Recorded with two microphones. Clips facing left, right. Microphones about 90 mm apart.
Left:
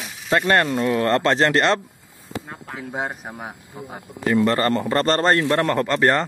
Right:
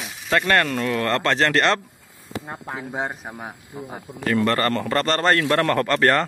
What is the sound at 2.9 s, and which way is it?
A man's voice, 5° left (ahead or behind).